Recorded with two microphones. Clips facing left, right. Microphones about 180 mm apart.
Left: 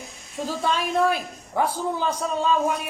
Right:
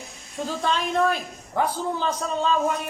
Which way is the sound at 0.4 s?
5° left (ahead or behind).